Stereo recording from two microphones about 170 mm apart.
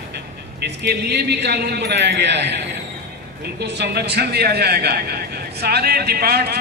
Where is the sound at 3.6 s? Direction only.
75° right (ahead or behind).